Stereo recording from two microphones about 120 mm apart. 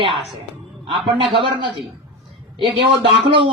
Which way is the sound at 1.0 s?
45° right (ahead or behind).